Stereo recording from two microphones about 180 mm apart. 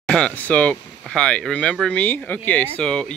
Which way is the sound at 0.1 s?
5° left (ahead or behind).